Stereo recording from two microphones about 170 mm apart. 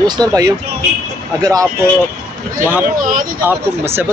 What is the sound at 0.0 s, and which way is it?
Speech, 25° right (ahead or behind).